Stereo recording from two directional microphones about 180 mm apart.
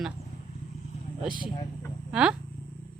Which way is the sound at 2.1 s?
5° right (ahead or behind).